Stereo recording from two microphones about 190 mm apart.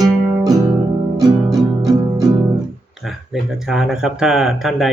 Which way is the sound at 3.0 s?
Centre (ahead or behind).